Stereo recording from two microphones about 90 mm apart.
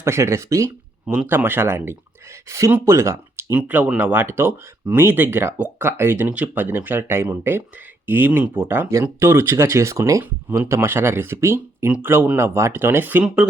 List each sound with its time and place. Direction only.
0.0 s speech: 30° right (ahead or behind)
1.0 s speech: 10° right (ahead or behind)
1.5 s speech: 25° right (ahead or behind)
3.5 s speech: 20° right (ahead or behind)
13.2 s speech: 10° right (ahead or behind)